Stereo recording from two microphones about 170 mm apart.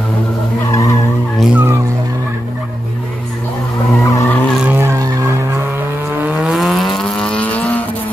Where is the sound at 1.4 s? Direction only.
10° right (ahead or behind).